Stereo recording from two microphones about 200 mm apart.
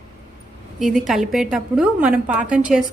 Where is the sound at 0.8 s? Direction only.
Centre (ahead or behind).